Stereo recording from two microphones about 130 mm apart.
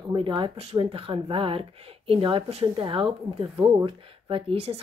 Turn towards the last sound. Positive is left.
turn(degrees=-50)  # may be behind; listen again after turning